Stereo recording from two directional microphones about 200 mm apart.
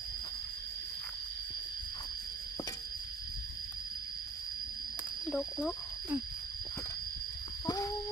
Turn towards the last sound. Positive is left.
turn(degrees=20)  # may be behind; listen again after turning